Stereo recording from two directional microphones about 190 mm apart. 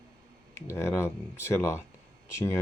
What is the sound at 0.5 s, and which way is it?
Speech, 15° left (ahead or behind).